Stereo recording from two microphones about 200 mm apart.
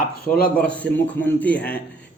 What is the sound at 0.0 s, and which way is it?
Speech, 45° left (ahead or behind).